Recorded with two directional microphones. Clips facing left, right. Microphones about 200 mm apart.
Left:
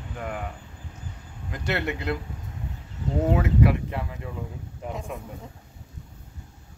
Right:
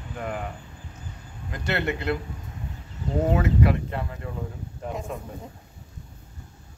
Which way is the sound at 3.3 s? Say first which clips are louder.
Left 1 dB; 10° left (ahead or behind).